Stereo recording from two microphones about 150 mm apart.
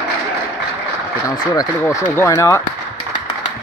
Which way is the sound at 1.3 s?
30° left (ahead or behind).